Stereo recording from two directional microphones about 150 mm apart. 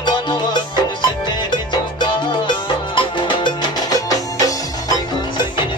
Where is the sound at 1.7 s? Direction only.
30° left (ahead or behind).